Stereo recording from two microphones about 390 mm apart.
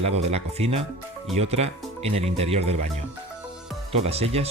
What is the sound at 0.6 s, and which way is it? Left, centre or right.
Speech, centre.